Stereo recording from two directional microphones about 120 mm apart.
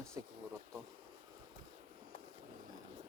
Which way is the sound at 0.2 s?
25° right (ahead or behind).